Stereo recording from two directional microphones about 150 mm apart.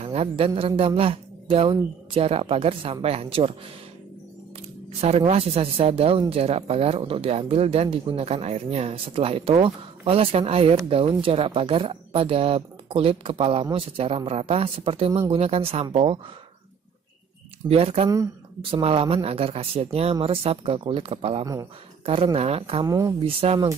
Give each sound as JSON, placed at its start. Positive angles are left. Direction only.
{"t": 0.0, "sound": "speech", "side_deg": -45}
{"t": 5.0, "sound": "speech", "side_deg": -45}
{"t": 17.6, "sound": "speech", "side_deg": -40}
{"t": 18.0, "sound": "speech", "side_deg": -20}
{"t": 18.6, "sound": "speech", "side_deg": -40}
{"t": 22.8, "sound": "speech", "side_deg": -25}
{"t": 23.2, "sound": "speech", "side_deg": -40}